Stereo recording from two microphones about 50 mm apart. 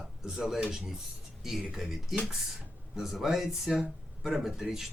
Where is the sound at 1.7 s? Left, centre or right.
Centre.